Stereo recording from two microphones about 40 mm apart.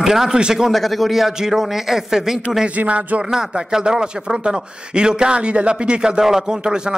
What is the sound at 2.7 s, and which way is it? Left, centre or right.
Speech, right.